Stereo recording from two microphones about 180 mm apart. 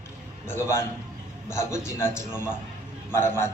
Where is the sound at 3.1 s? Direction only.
15° left (ahead or behind).